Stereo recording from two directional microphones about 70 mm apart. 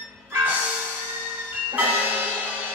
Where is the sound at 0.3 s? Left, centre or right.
Right.